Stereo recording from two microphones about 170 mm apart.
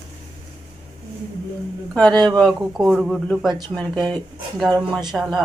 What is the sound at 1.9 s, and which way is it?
Speech, 5° left (ahead or behind).